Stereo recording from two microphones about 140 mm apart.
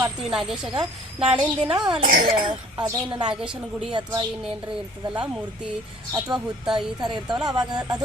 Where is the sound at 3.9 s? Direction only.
30° right (ahead or behind).